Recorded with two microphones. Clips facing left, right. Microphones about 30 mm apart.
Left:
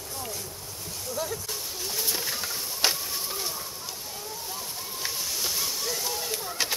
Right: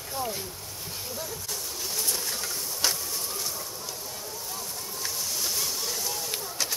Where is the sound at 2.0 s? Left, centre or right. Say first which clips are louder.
Left 2 dB; centre.